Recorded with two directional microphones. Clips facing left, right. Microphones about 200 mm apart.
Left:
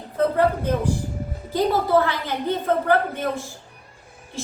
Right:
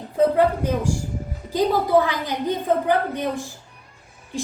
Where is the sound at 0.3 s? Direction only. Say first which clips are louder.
Right 1 dB; 15° right (ahead or behind).